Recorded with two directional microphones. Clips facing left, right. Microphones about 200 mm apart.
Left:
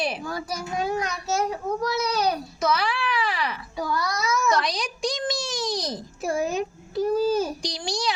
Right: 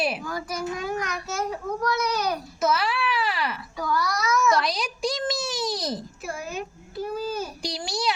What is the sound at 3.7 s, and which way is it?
Child singing, 25° left (ahead or behind).